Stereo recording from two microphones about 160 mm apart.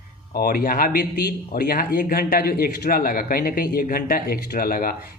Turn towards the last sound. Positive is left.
turn(degrees=65)  # may be behind; listen again after turning